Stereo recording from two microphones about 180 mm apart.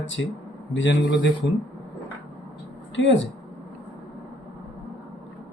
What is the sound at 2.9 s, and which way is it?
Speech, 90° left.